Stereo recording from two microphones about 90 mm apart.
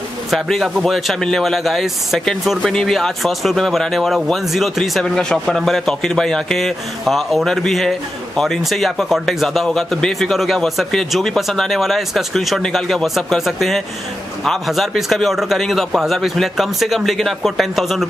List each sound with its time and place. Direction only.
0.3 s speech: centre (ahead or behind)